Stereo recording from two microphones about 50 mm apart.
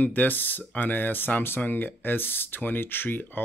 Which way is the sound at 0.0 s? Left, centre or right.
Left.